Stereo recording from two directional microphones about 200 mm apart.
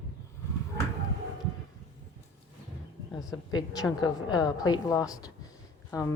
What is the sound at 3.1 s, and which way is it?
A woman's voice, 20° left (ahead or behind).